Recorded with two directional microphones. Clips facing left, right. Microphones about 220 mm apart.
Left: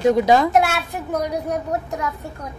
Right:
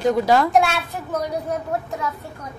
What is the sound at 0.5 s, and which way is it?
Speech, 10° left (ahead or behind).